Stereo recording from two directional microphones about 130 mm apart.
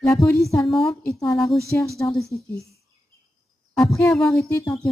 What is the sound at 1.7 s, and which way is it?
Speech, 15° left (ahead or behind).